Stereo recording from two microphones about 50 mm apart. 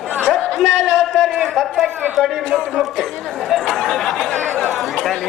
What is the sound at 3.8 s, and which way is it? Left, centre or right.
Chatter, centre.